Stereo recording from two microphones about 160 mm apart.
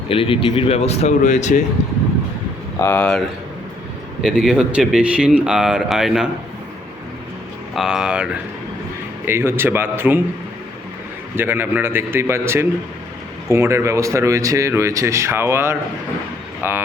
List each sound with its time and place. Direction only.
0.1 s speech: 35° left (ahead or behind)
2.8 s speech: 10° left (ahead or behind)
7.8 s speech: 5° right (ahead or behind)
11.3 s speech: 15° right (ahead or behind)